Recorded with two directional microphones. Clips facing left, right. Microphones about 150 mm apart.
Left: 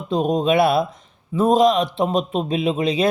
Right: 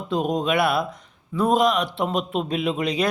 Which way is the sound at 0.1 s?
20° left (ahead or behind).